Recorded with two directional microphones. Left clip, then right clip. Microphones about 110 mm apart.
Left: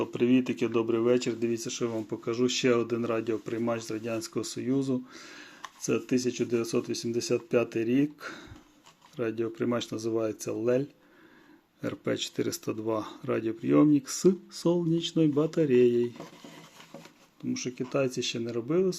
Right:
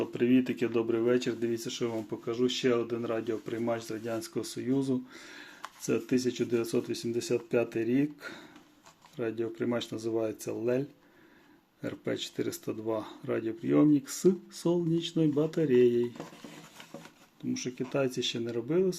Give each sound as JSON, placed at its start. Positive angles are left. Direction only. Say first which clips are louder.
{"t": 0.0, "sound": "speech", "louder": "left 1 dB", "side_deg": 40}
{"t": 2.0, "sound": "speech", "louder": "left 2 dB", "side_deg": 65}
{"t": 3.4, "sound": "speech", "louder": "left 2 dB", "side_deg": 50}
{"t": 17.5, "sound": "speech", "louder": "left 2 dB", "side_deg": 35}